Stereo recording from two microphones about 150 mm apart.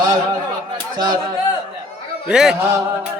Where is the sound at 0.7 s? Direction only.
30° right (ahead or behind).